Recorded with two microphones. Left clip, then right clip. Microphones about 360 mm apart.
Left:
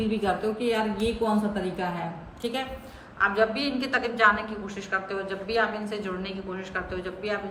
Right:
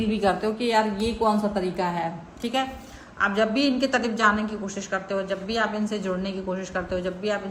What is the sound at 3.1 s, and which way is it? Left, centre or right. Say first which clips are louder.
A woman's voice: right 1 dB; right.